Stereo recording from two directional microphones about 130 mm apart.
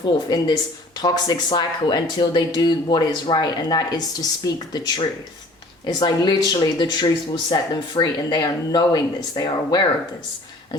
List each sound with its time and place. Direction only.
0.0 s speech: 35° left (ahead or behind)